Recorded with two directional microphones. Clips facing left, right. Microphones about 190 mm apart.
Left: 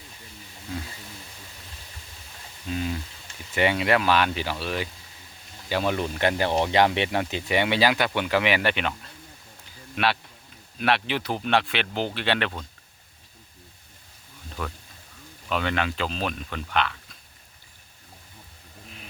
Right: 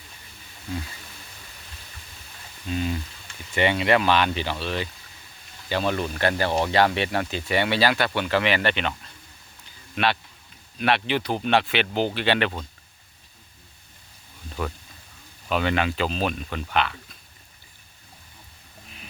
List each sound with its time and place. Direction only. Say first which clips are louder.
2.6 s a sound: right 2 dB; centre (ahead or behind)
3.5 s speech: right 1 dB; 5° left (ahead or behind)
15.4 s speech: right 3 dB; 5° right (ahead or behind)